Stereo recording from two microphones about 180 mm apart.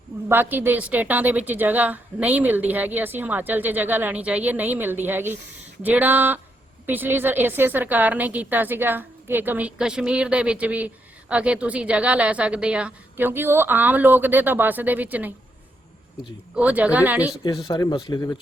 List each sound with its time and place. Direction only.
0.3 s a woman's voice: 10° right (ahead or behind)
16.6 s a woman's voice: 5° right (ahead or behind)
17.4 s speech: 20° left (ahead or behind)